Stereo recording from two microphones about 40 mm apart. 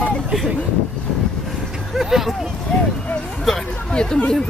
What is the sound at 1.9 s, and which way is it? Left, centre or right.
Speech, centre.